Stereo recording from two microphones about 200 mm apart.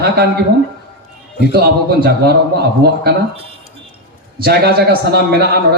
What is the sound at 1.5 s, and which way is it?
A man's voice, 50° right (ahead or behind).